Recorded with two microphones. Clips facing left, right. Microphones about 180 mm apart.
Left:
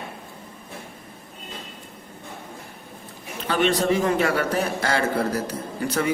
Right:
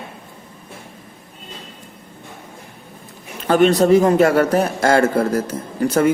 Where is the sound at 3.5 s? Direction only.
45° right (ahead or behind).